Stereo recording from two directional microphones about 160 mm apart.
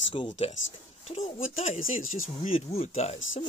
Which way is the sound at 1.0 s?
45° left (ahead or behind).